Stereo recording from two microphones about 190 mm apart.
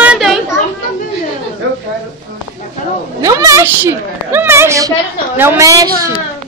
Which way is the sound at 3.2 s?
15° right (ahead or behind).